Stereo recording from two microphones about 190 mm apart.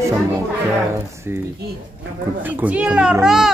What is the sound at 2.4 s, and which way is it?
A child's voice, 10° right (ahead or behind).